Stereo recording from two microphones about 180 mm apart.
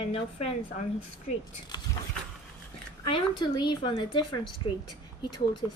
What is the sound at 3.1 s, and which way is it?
Speech, 25° left (ahead or behind).